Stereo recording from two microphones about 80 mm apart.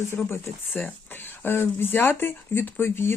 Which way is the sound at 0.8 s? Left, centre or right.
Left.